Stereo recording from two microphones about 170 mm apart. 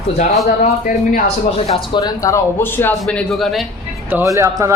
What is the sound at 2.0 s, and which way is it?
A man's voice, 20° left (ahead or behind).